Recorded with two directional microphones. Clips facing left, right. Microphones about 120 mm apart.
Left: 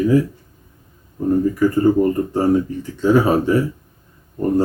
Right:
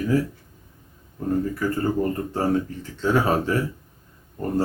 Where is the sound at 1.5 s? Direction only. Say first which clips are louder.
Left 9 dB; 15° left (ahead or behind).